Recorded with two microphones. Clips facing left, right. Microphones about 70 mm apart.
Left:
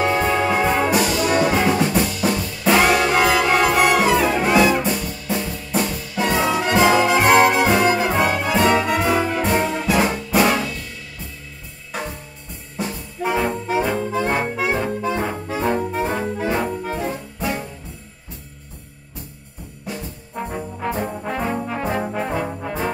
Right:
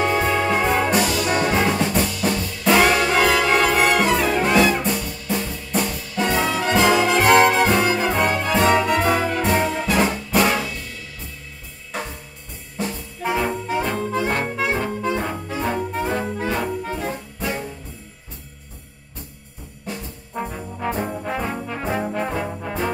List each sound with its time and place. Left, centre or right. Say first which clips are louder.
0.0 s music: left 1 dB; centre
12.7 s brass instrument: left 1 dB; centre
16.5 s music: left 2 dB; centre
20.8 s brass instrument: right 1 dB; centre
21.6 s trombone: left 1 dB; centre